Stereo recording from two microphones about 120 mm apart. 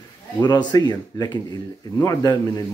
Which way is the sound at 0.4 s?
35° left (ahead or behind).